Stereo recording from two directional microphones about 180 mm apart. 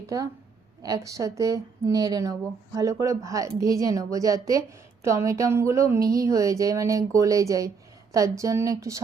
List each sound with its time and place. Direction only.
0.8 s speech: 20° right (ahead or behind)